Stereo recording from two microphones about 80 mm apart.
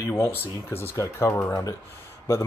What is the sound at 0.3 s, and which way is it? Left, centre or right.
Speech, left.